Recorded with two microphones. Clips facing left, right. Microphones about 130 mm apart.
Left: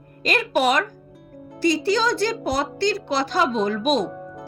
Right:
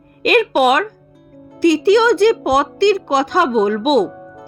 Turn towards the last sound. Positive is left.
turn(degrees=0)  # may be behind; listen again after turning